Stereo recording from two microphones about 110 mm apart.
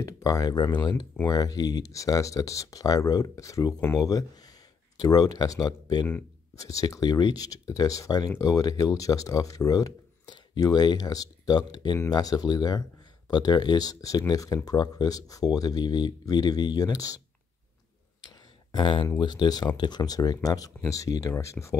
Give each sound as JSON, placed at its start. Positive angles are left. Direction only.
{"t": 0.0, "sound": "speech", "side_deg": 30}
{"t": 18.8, "sound": "speech", "side_deg": 50}